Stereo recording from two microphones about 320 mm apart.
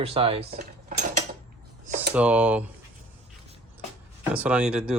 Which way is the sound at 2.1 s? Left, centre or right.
Centre.